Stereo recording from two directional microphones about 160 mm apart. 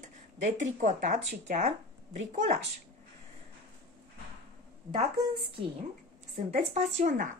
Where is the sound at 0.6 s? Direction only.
50° right (ahead or behind).